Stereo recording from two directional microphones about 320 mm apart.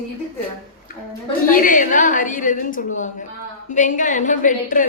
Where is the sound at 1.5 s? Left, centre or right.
Left.